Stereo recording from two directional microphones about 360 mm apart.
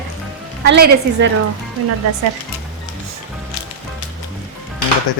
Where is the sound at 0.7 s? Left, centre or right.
Right.